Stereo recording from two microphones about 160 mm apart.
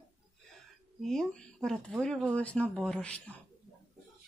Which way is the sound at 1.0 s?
5° left (ahead or behind).